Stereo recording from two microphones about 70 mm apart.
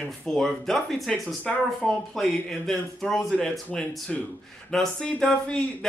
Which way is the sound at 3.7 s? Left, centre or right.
Centre.